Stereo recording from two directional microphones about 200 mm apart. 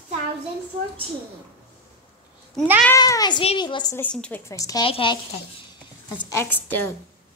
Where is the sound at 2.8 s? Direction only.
15° left (ahead or behind).